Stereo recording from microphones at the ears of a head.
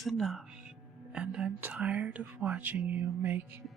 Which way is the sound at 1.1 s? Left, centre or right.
Right.